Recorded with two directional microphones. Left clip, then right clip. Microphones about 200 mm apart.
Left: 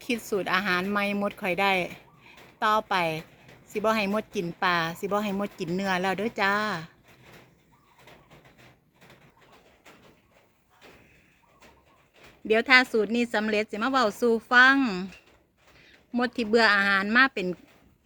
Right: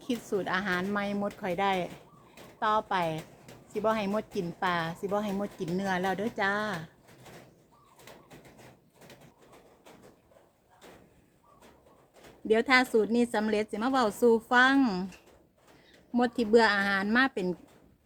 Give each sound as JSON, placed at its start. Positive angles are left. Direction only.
{"t": 0.0, "sound": "a woman's voice", "side_deg": 40}
{"t": 12.5, "sound": "a woman's voice", "side_deg": 20}
{"t": 16.1, "sound": "a woman's voice", "side_deg": 15}